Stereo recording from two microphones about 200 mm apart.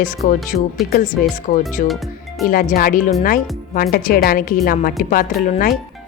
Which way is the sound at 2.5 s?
45° left (ahead or behind).